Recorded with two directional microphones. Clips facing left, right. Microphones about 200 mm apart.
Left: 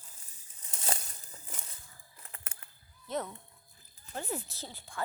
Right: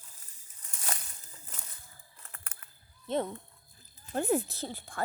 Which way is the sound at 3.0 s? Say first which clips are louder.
Right 5 dB; 30° right (ahead or behind).